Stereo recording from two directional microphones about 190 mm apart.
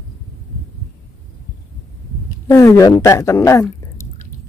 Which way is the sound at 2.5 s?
15° left (ahead or behind).